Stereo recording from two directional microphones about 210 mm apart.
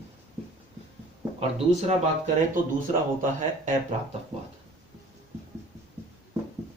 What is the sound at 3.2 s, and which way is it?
Speech, 40° right (ahead or behind).